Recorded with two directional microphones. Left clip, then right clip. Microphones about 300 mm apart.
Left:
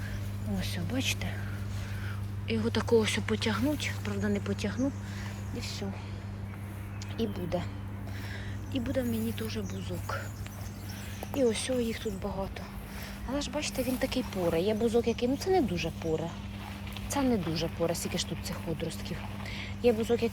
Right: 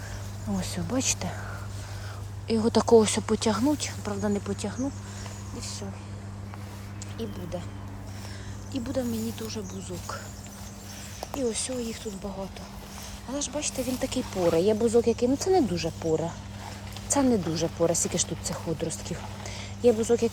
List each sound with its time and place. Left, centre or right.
0.6 s speech: centre
2.5 s speech: centre
7.2 s speech: centre
8.7 s speech: centre
11.3 s speech: centre
19.5 s a sound: centre